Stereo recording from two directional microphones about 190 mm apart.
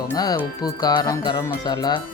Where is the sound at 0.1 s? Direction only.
20° left (ahead or behind).